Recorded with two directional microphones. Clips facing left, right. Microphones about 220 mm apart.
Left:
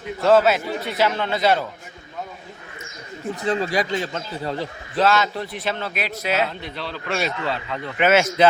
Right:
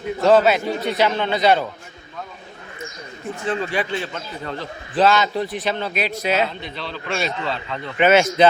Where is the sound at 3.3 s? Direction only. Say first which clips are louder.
Left 1 dB; 40° left (ahead or behind).